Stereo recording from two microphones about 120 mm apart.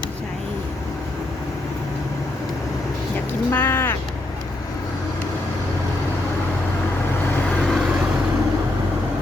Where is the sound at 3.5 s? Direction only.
20° left (ahead or behind).